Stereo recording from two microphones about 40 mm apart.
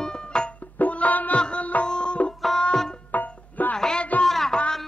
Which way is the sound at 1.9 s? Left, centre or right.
Left.